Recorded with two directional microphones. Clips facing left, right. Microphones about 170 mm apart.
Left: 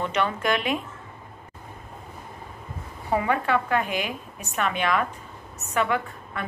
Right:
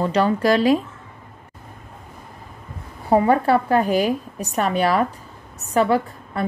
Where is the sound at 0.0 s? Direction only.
35° right (ahead or behind).